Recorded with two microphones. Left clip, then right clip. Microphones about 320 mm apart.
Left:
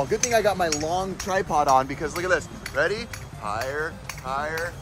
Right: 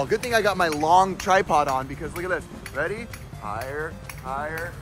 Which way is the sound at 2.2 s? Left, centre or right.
Centre.